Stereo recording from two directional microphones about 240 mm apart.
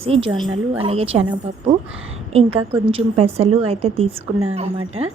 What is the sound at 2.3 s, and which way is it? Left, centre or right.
A woman's voice, right.